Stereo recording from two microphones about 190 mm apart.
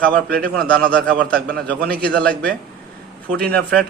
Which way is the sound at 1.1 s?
50° right (ahead or behind).